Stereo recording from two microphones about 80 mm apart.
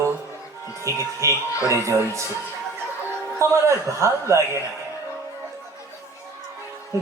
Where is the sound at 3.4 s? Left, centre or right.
Right.